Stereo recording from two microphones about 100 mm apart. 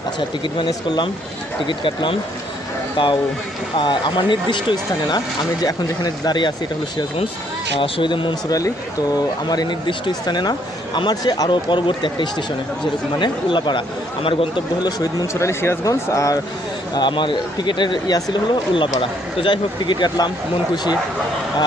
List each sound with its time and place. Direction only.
0.2 s speech: 55° left (ahead or behind)
1.6 s speech: 55° left (ahead or behind)
7.8 s speech: 55° left (ahead or behind)
15.3 s speech: 30° left (ahead or behind)
16.9 s speech: 50° left (ahead or behind)